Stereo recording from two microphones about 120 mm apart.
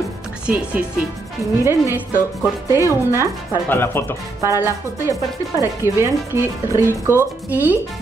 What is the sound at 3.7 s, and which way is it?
Speech, 20° left (ahead or behind).